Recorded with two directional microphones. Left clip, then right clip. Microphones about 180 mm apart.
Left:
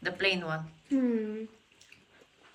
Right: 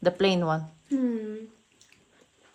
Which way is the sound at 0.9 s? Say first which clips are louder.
Right 1 dB; centre (ahead or behind).